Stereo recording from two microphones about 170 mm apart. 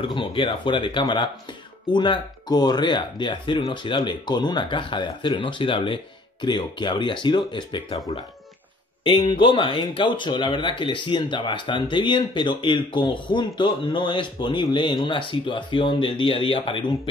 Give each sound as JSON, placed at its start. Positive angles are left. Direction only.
{"t": 0.0, "sound": "speech", "side_deg": 30}
{"t": 9.0, "sound": "speech", "side_deg": 30}